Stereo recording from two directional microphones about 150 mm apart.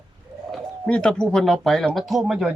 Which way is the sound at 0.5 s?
5° left (ahead or behind).